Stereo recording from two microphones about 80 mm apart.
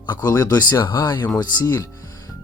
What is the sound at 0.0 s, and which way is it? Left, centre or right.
Speech, left.